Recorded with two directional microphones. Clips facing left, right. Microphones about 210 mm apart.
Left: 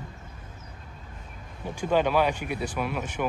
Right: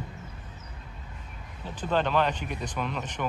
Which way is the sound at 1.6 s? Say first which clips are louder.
Left 3 dB; 10° left (ahead or behind).